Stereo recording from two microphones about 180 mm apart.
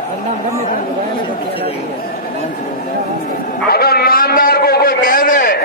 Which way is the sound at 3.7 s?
60° left (ahead or behind).